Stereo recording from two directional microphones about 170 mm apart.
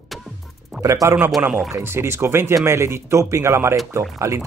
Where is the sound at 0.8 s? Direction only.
20° right (ahead or behind).